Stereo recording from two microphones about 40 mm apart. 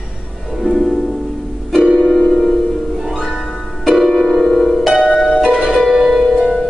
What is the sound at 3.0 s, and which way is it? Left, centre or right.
Music, centre.